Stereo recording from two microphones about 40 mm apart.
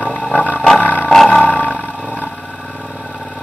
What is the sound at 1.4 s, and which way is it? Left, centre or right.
Roar, left.